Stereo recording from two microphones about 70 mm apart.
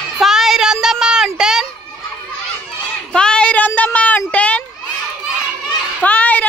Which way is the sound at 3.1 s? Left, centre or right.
Centre.